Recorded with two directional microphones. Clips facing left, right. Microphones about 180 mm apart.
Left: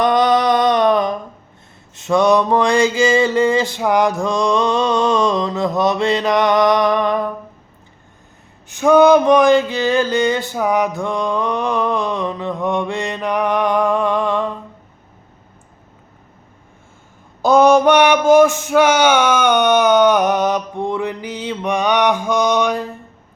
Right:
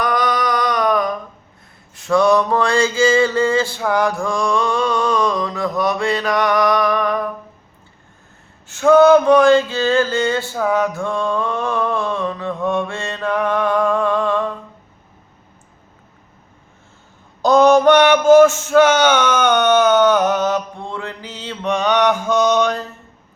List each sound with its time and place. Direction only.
0.0 s a sound: 25° left (ahead or behind)
2.0 s mantra: 20° left (ahead or behind)
8.6 s male singing: 15° left (ahead or behind)
17.4 s male singing: 10° left (ahead or behind)